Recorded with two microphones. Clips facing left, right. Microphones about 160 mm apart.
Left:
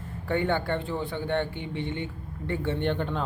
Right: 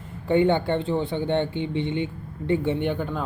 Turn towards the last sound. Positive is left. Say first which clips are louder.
# right 3 dB
turn(degrees=-5)  # may be behind; listen again after turning